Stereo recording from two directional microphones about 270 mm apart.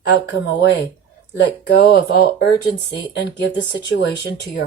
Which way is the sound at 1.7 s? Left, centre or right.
Left.